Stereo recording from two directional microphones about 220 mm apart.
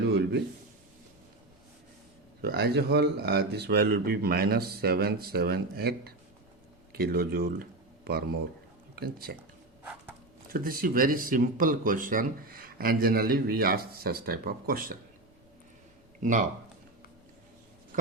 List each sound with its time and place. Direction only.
0.0 s a sound: 50° right (ahead or behind)
2.4 s speech: 45° right (ahead or behind)
10.5 s speech: 40° right (ahead or behind)
16.2 s speech: 35° right (ahead or behind)